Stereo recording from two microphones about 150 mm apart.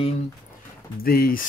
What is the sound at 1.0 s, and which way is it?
Speech, 80° left.